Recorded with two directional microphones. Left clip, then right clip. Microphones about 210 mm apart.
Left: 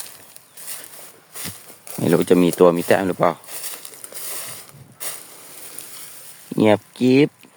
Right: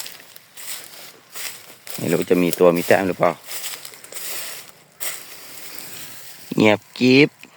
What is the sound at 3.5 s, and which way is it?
Crumpling, centre (ahead or behind).